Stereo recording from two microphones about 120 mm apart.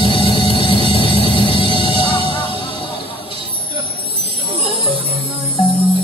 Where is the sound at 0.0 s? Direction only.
50° left (ahead or behind).